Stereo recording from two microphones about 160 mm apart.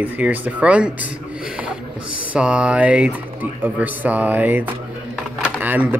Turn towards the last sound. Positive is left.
turn(degrees=-10)  # may be behind; listen again after turning